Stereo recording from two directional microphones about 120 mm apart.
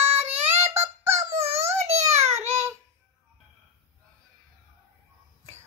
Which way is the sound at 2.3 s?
20° right (ahead or behind).